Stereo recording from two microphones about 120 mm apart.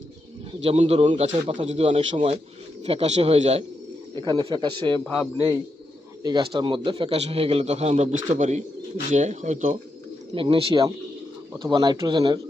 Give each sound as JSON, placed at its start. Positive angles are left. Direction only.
{"t": 0.6, "sound": "a man's voice", "side_deg": -60}
{"t": 4.1, "sound": "speech", "side_deg": -40}
{"t": 5.0, "sound": "speech", "side_deg": 10}
{"t": 6.2, "sound": "a man's voice", "side_deg": -45}
{"t": 9.1, "sound": "speech", "side_deg": -85}
{"t": 10.3, "sound": "a man's voice", "side_deg": -45}